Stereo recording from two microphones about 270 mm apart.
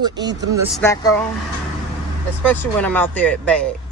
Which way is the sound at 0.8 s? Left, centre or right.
Centre.